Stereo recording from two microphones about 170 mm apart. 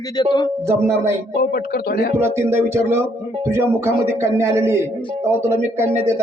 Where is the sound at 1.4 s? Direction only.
65° left (ahead or behind).